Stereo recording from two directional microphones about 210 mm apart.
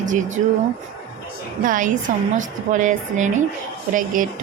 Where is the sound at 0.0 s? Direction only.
35° right (ahead or behind).